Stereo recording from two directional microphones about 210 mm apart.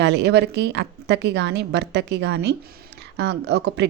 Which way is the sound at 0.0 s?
55° right (ahead or behind).